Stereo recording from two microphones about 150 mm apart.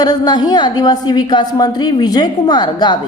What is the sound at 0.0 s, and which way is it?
A woman's voice, 25° left (ahead or behind).